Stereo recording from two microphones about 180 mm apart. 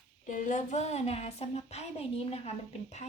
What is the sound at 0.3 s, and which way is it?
Speech, 45° left (ahead or behind).